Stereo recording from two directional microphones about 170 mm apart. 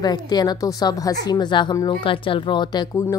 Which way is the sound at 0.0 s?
25° left (ahead or behind).